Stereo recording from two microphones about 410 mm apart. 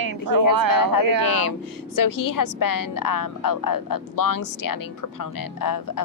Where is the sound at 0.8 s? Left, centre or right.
Left.